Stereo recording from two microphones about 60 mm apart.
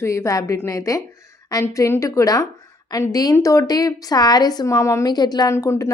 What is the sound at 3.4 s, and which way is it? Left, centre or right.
A woman's voice, left.